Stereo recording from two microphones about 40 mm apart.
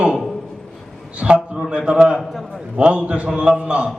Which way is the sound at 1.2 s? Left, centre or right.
Centre.